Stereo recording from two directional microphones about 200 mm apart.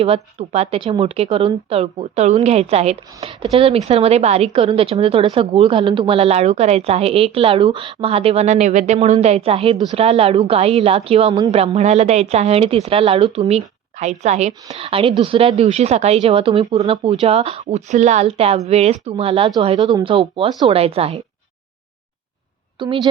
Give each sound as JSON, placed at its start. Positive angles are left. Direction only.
{"t": 0.0, "sound": "a woman's voice", "side_deg": -30}
{"t": 22.8, "sound": "a woman's voice", "side_deg": -25}